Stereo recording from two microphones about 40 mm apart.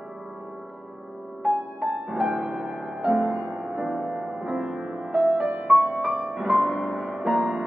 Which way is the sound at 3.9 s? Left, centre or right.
Centre.